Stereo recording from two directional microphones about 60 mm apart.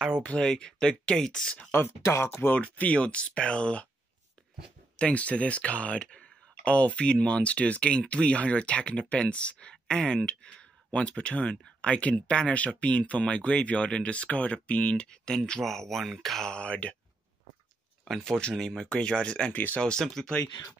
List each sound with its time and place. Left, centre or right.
0.2 s speech: left
1.7 s speech: left
2.6 s speech: left
4.9 s speech: left
15.6 s speech: centre
16.4 s speech: centre
18.0 s speech: centre
19.5 s speech: left
19.8 s speech: centre